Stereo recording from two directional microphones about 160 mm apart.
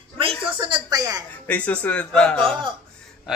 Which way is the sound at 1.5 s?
10° left (ahead or behind).